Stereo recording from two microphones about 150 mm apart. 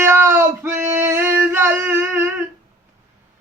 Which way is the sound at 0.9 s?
15° right (ahead or behind).